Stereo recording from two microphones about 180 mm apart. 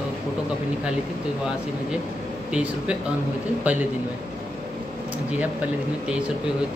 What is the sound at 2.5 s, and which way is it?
A man's voice, 5° right (ahead or behind).